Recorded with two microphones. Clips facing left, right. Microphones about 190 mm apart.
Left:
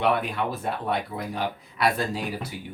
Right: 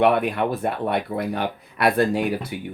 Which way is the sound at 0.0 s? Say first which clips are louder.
Right 6 dB; 60° right (ahead or behind).